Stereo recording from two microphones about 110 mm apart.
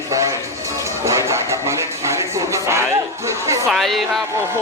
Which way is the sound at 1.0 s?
25° right (ahead or behind).